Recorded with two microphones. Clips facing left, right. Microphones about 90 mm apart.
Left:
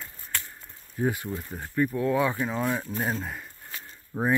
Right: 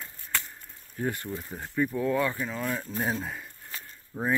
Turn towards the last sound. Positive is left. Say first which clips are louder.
# left 4 dB
turn(degrees=20)  # may be behind; listen again after turning